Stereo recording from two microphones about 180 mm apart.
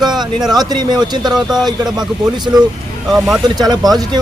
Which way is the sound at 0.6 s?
25° right (ahead or behind).